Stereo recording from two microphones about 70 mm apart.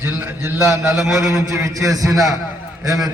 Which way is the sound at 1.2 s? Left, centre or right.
Right.